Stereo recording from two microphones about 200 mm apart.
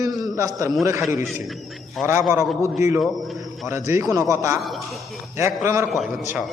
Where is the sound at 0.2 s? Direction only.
15° right (ahead or behind).